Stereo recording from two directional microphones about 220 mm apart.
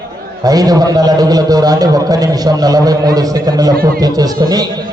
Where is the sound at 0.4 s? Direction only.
15° right (ahead or behind).